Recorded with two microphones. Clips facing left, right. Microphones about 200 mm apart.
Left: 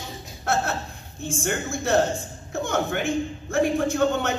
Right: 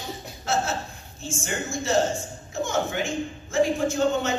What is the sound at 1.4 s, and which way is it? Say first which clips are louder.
A man's voice: left 3 dB; 60° left (ahead or behind).